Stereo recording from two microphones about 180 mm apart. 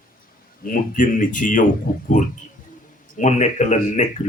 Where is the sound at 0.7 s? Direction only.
45° left (ahead or behind).